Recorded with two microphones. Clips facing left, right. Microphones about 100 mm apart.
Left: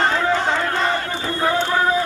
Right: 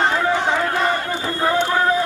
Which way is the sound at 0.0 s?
15° right (ahead or behind).